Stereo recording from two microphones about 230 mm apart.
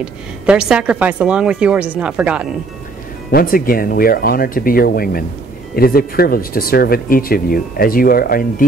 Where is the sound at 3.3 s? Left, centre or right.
Left.